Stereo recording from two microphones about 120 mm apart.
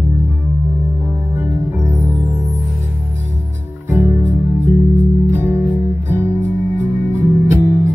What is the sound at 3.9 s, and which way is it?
Music, 15° right (ahead or behind).